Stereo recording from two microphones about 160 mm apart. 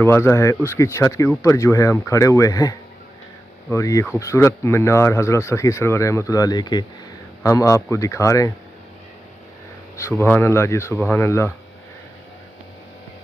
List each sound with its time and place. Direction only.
0.0 s speech: 15° left (ahead or behind)
9.9 s speech: 15° left (ahead or behind)